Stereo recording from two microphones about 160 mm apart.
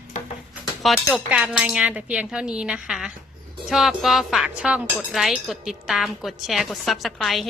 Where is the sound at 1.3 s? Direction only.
5° right (ahead or behind).